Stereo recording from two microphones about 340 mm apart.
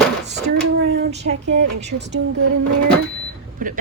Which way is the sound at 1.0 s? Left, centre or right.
Right.